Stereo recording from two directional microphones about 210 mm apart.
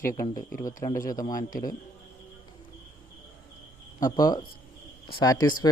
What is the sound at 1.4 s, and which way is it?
Speech, 40° left (ahead or behind).